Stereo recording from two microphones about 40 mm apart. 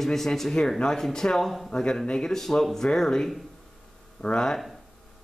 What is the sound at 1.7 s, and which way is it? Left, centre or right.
Speech, left.